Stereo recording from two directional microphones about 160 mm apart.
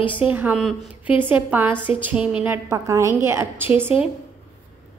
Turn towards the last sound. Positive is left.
turn(degrees=-10)  # may be behind; listen again after turning